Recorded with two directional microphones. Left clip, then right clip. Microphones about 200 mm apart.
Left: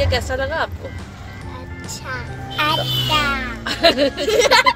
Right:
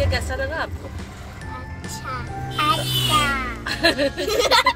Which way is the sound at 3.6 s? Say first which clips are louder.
Left 6 dB; 45° left (ahead or behind).